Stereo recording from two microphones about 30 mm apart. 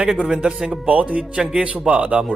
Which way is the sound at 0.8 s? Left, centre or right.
Right.